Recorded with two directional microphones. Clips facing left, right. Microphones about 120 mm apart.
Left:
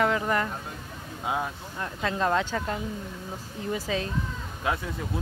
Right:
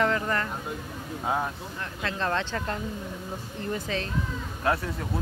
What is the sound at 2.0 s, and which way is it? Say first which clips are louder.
Speech: left 3 dB; 10° left (ahead or behind).